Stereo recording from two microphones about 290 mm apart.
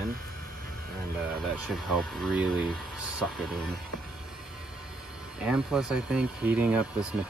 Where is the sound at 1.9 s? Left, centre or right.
Centre.